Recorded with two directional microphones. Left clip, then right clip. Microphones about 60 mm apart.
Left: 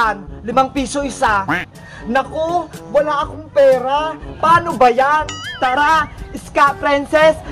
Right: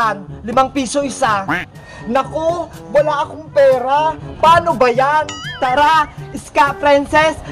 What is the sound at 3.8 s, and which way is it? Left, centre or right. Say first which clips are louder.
A man's voice: right 3 dB; left.